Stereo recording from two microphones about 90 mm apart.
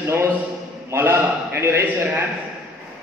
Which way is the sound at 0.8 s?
25° right (ahead or behind).